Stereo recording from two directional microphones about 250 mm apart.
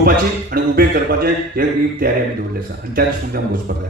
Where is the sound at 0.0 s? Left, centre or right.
Right.